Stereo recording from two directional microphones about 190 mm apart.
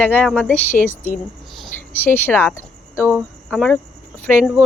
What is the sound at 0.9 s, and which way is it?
Speech, 10° right (ahead or behind).